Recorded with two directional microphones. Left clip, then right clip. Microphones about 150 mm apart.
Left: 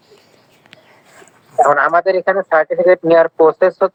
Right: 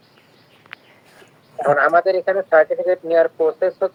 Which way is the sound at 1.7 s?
Centre (ahead or behind).